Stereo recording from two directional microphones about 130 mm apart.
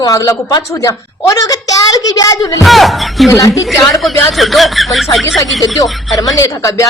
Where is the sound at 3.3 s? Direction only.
25° left (ahead or behind).